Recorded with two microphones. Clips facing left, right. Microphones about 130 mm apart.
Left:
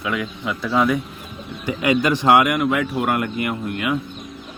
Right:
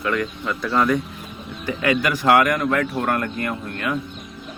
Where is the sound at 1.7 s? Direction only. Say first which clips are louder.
Left 2 dB; 20° left (ahead or behind).